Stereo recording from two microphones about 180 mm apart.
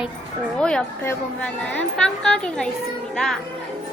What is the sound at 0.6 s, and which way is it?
A woman's voice, 5° left (ahead or behind).